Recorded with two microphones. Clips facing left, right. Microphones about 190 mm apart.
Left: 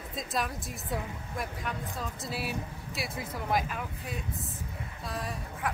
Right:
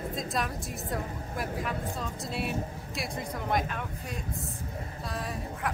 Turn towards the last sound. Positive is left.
turn(degrees=0)  # may be behind; listen again after turning